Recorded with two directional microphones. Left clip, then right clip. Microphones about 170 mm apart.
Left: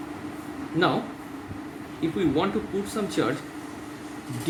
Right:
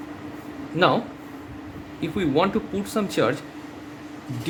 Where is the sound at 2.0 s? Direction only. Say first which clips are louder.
Right 3 dB; 60° right (ahead or behind).